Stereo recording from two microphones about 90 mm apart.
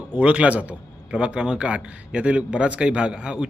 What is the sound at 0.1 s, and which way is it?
A man's voice, 15° right (ahead or behind).